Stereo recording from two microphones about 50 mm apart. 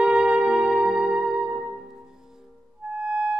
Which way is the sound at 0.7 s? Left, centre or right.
Centre.